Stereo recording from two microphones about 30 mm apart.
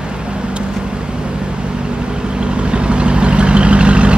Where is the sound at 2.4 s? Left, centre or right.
Right.